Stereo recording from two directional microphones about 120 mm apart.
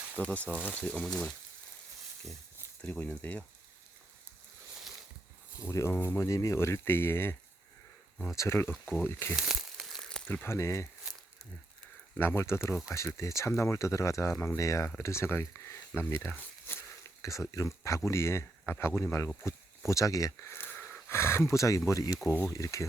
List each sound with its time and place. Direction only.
0.2 s speech: 10° left (ahead or behind)
2.8 s speech: 10° left (ahead or behind)
5.5 s speech: 25° left (ahead or behind)
8.4 s speech: 20° left (ahead or behind)
9.3 s crumpling: 5° right (ahead or behind)
10.2 s speech: 15° left (ahead or behind)
12.1 s speech: 20° left (ahead or behind)